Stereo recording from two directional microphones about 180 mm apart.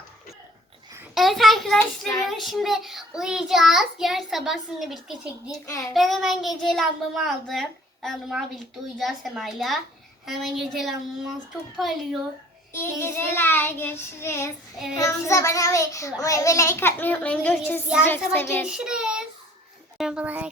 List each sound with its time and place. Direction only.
1.1 s a child's voice: centre (ahead or behind)
5.6 s child singing: 15° left (ahead or behind)
5.9 s a child's voice: centre (ahead or behind)
12.7 s child singing: 15° left (ahead or behind)
18.6 s child singing: 5° right (ahead or behind)
20.0 s speech: 5° right (ahead or behind)